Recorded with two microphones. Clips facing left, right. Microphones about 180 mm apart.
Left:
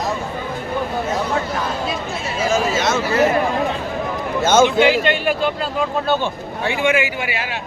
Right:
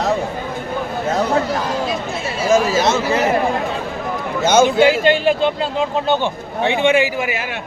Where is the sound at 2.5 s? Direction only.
35° right (ahead or behind).